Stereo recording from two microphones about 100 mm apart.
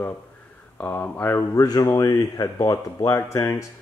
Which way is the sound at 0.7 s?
15° left (ahead or behind).